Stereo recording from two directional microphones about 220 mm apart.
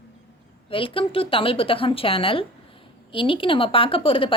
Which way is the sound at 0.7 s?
25° left (ahead or behind).